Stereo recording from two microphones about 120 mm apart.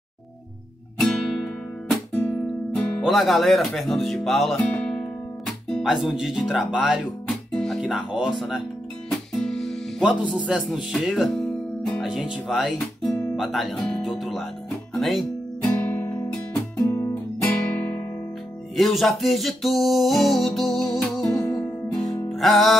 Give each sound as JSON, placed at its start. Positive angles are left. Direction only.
{"t": 0.9, "sound": "music", "side_deg": 5}
{"t": 5.7, "sound": "speech", "side_deg": 0}
{"t": 7.5, "sound": "music", "side_deg": 5}
{"t": 10.3, "sound": "music", "side_deg": -5}
{"t": 15.0, "sound": "speech", "side_deg": 0}
{"t": 15.6, "sound": "music", "side_deg": 15}
{"t": 16.8, "sound": "guitar", "side_deg": 25}
{"t": 18.8, "sound": "music", "side_deg": 0}
{"t": 21.3, "sound": "music", "side_deg": 20}
{"t": 22.0, "sound": "music", "side_deg": 0}